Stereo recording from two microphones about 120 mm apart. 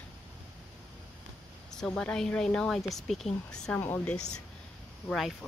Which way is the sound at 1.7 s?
5° left (ahead or behind).